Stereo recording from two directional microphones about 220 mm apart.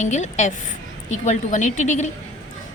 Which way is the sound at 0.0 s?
30° left (ahead or behind).